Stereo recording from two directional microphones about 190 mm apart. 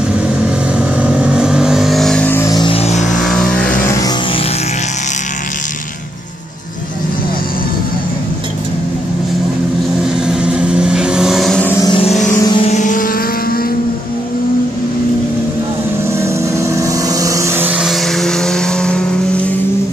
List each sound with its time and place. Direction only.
0.4 s vehicle: 5° right (ahead or behind); by 3.3 s 40° left (ahead or behind)
3.3 s vehicle: centre (ahead or behind)
10.1 s vehicle: 5° right (ahead or behind)
11.8 s vehicle: 30° left (ahead or behind)
12.4 s vehicle: 20° left (ahead or behind)
12.6 s vehicle: 40° left (ahead or behind)
16.1 s vehicle: 15° right (ahead or behind); by 19.5 s 5° left (ahead or behind)